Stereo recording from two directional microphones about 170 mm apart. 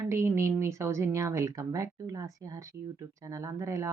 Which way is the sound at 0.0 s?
15° right (ahead or behind).